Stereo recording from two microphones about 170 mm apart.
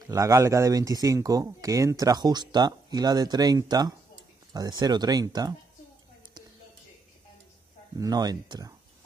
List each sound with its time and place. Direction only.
0.1 s speech: 20° right (ahead or behind)
8.0 s speech: 25° right (ahead or behind)